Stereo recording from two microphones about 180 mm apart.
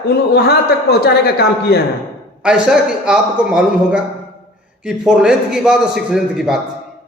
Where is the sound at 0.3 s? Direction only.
60° left (ahead or behind).